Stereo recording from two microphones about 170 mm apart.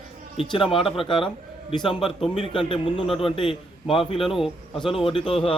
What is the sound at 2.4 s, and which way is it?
A man's voice, 30° left (ahead or behind).